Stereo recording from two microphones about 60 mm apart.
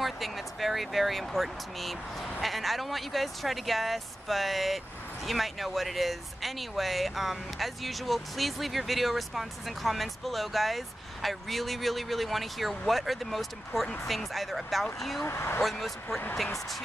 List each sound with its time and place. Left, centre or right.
0.0 s speech: centre
15.2 s speech: left
15.6 s speech: centre